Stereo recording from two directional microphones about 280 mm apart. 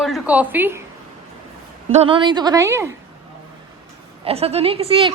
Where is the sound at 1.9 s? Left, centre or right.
Right.